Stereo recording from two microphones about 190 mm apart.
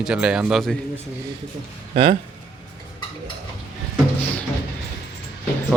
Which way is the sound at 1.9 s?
30° right (ahead or behind).